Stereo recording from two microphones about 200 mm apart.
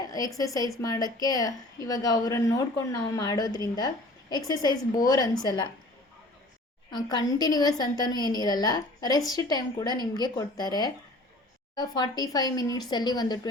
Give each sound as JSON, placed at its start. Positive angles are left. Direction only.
{"t": 0.0, "sound": "a woman's voice", "side_deg": 20}
{"t": 6.9, "sound": "a woman's voice", "side_deg": 20}